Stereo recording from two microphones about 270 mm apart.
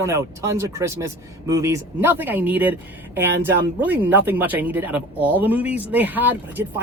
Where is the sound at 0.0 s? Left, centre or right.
Centre.